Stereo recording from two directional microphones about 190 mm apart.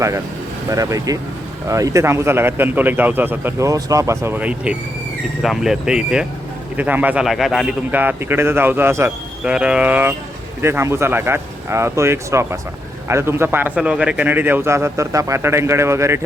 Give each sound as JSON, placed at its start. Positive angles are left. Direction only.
{"t": 0.7, "sound": "speech", "side_deg": -15}